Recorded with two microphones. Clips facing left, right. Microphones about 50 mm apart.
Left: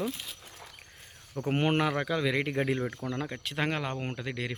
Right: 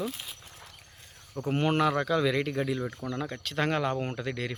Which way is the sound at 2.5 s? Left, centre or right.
Left.